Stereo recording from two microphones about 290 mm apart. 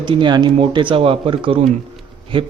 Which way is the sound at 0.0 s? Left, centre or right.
Centre.